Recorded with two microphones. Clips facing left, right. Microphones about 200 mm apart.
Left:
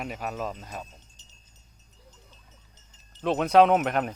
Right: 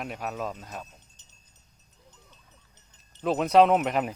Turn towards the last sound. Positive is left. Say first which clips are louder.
# even
turn(degrees=0)  # may be behind; listen again after turning